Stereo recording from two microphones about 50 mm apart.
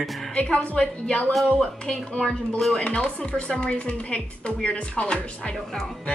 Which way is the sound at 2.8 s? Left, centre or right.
Left.